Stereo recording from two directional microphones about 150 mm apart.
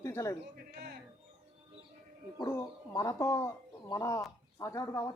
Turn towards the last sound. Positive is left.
turn(degrees=25)  # may be behind; listen again after turning